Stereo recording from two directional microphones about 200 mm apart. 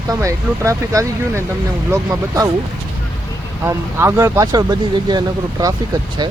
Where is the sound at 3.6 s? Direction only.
15° right (ahead or behind).